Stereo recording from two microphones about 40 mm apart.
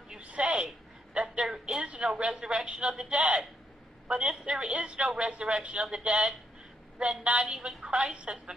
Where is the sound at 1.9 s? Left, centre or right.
Right; by 4.9 s centre.